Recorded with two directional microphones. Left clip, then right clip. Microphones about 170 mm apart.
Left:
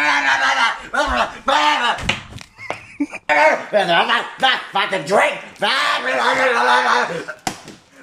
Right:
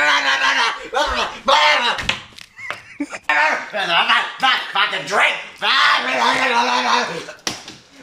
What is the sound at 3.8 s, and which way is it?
Speech, 40° left (ahead or behind).